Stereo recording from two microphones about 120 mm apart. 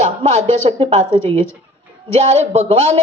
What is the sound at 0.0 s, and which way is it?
A man's voice, 70° right (ahead or behind).